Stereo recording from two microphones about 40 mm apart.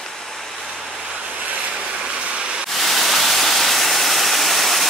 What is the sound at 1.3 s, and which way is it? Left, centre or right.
Vehicle, right.